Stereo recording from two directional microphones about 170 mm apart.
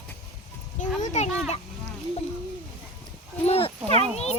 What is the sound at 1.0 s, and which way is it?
Children playing, 45° left (ahead or behind).